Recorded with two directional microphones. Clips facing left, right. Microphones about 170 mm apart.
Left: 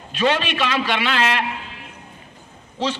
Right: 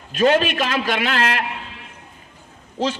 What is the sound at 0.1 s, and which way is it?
A man's voice, 45° right (ahead or behind).